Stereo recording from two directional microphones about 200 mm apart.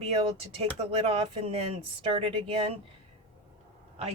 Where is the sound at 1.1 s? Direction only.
30° right (ahead or behind).